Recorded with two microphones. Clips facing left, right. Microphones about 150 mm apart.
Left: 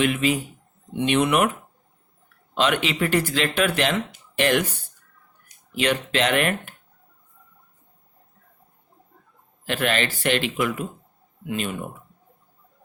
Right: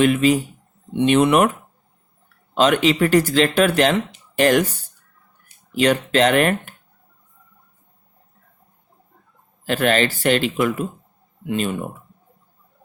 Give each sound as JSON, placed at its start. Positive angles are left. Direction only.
{"t": 0.0, "sound": "speech", "side_deg": -40}
{"t": 2.6, "sound": "speech", "side_deg": -40}
{"t": 5.7, "sound": "speech", "side_deg": -40}
{"t": 9.6, "sound": "speech", "side_deg": -40}